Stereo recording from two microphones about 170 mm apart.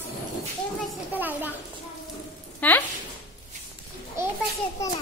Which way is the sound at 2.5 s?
10° left (ahead or behind).